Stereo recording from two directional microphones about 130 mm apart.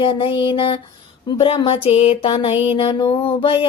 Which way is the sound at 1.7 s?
50° left (ahead or behind).